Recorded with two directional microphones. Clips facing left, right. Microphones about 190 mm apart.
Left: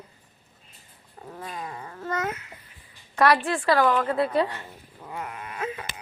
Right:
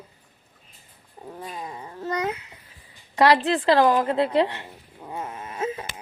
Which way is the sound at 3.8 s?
35° right (ahead or behind).